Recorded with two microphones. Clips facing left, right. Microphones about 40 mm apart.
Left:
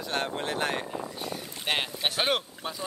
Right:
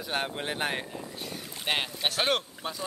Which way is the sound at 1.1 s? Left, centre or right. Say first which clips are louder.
Left 3 dB; centre.